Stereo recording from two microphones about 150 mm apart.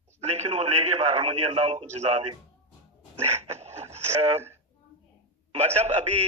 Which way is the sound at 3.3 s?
45° right (ahead or behind).